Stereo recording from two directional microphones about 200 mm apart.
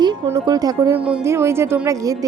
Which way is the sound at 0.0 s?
20° right (ahead or behind).